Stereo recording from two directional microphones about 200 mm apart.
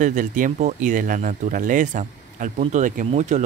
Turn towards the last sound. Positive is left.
turn(degrees=-35)  # may be behind; listen again after turning